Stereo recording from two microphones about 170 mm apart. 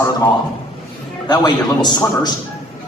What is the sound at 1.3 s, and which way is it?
A man's voice, 25° left (ahead or behind).